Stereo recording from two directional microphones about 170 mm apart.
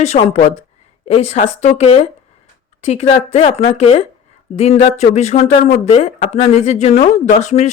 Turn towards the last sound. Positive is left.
turn(degrees=45)  # may be behind; listen again after turning